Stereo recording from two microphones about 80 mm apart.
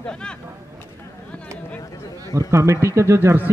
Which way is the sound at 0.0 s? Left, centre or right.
Centre.